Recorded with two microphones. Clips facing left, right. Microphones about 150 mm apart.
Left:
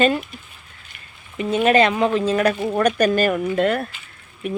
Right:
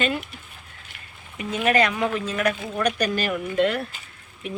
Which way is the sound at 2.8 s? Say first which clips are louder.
Left 7 dB; 45° left (ahead or behind).